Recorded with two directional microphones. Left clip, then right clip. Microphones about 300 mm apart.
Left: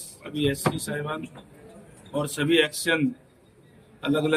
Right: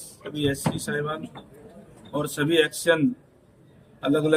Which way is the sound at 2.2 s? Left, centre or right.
Centre.